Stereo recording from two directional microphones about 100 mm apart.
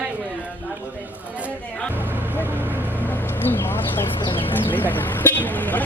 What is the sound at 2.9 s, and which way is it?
Vehicle, 20° left (ahead or behind).